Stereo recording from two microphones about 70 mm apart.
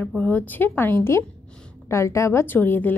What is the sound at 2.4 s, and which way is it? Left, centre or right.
Speech, left.